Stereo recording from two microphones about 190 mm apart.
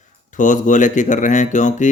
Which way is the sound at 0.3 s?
40° left (ahead or behind).